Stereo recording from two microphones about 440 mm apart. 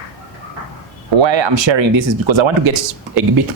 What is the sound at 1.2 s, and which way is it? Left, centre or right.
Speech, right.